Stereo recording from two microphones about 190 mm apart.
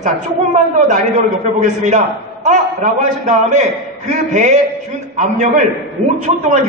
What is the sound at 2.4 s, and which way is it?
A man's voice, 40° right (ahead or behind).